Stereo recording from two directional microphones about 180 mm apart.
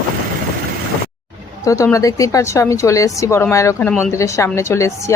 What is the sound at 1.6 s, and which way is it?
A woman's voice, 15° left (ahead or behind).